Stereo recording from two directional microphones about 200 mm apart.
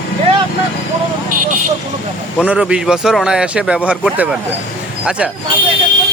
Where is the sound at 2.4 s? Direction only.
5° right (ahead or behind).